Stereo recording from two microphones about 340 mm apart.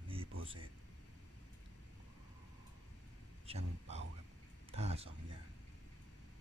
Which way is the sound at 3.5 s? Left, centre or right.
Centre.